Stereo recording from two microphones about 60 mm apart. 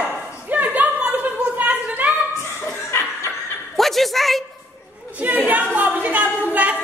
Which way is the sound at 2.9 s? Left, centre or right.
Left.